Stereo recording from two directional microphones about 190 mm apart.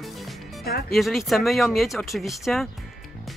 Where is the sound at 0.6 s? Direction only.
55° left (ahead or behind).